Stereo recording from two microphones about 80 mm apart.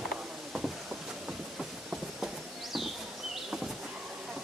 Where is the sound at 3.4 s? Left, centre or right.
Centre.